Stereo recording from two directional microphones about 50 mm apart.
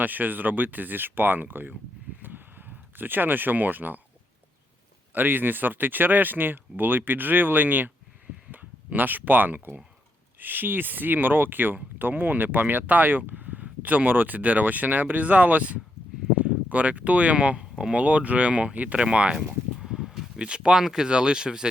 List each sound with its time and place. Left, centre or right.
0.0 s speech: right
2.2 s a sound: right
5.1 s speech: right; by 18.0 s centre
18.0 s speech: right
19.8 s a sound: centre
20.4 s speech: centre